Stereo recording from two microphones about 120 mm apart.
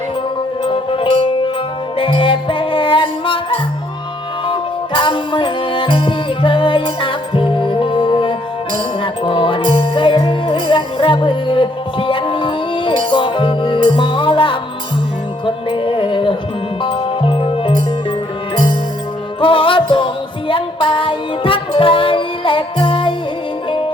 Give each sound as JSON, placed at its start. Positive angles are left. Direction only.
{"t": 0.6, "sound": "music", "side_deg": 45}
{"t": 19.4, "sound": "music", "side_deg": 45}